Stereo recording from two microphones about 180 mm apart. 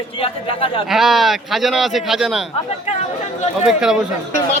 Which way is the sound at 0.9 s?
Centre (ahead or behind).